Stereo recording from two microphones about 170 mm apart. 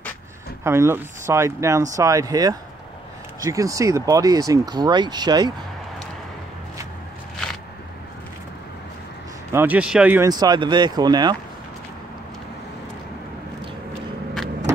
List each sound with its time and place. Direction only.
0.7 s speech: 15° right (ahead or behind)
9.5 s speech: 10° right (ahead or behind)
10.2 s speech: 25° right (ahead or behind)